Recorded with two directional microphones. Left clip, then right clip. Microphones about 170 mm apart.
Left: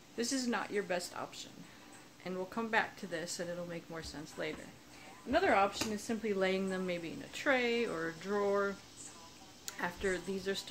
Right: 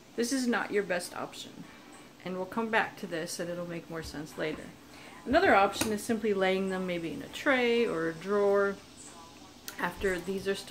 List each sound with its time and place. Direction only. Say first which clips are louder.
0.2 s speech: right 6 dB; 15° left (ahead or behind)